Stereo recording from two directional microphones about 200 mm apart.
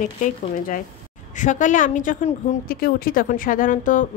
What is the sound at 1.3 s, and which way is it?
A woman's voice, 40° left (ahead or behind).